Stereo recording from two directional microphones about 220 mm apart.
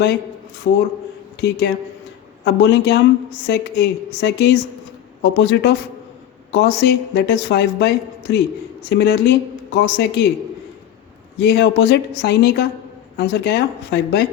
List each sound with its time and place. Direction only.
0.7 s a woman's voice: 55° left (ahead or behind)
11.3 s a woman's voice: 50° left (ahead or behind)